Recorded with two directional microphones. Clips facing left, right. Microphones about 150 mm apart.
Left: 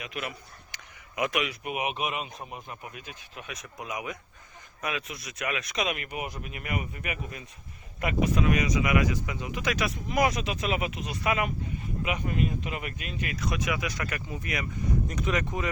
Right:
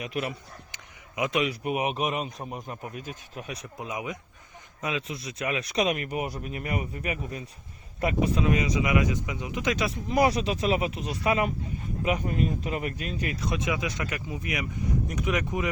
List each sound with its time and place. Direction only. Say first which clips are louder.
0.0 s speech: right 5 dB; 35° right (ahead or behind)
0.7 s a sound: right 1 dB; 20° right (ahead or behind)
1.4 s speech: right 4 dB; 35° right (ahead or behind); by 15.7 s 15° right (ahead or behind)